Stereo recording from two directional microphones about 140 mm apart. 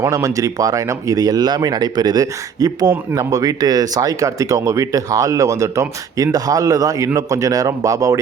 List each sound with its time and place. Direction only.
0.0 s speech: 25° right (ahead or behind)